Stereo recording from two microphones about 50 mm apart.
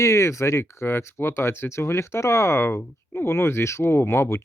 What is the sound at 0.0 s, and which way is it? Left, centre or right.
Speech, left.